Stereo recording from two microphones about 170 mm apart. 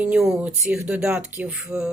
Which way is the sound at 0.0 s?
5° right (ahead or behind).